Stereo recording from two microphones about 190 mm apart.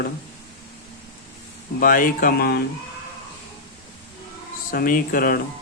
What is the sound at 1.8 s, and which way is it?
Speech, 45° left (ahead or behind).